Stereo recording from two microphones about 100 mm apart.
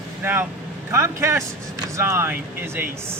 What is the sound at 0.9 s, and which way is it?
Speech, 25° right (ahead or behind).